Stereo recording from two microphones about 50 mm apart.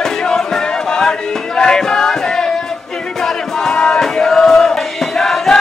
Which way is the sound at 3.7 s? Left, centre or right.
Centre.